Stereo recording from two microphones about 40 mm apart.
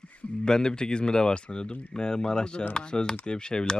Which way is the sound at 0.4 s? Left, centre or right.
Centre.